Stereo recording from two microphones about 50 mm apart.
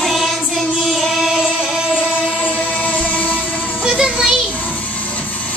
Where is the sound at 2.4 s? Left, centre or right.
Left.